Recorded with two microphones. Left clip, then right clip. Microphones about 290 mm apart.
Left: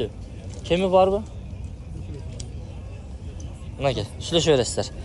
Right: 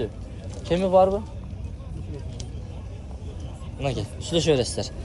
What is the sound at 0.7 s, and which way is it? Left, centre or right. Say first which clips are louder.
Speech: even; centre.